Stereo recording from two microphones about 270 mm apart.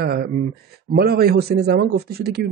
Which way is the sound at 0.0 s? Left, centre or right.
Right.